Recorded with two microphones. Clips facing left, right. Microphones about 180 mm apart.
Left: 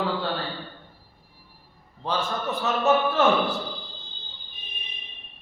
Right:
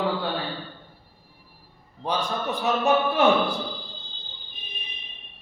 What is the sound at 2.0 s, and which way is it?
A man's voice, 15° right (ahead or behind).